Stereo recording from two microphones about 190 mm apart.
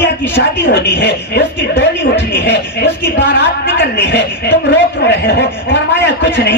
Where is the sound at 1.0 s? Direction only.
65° left (ahead or behind).